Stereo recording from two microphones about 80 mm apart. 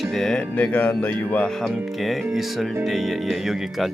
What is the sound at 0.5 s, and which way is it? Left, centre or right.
Speech, centre.